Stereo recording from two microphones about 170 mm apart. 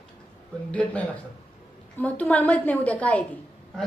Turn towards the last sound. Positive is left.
turn(degrees=10)  # may be behind; listen again after turning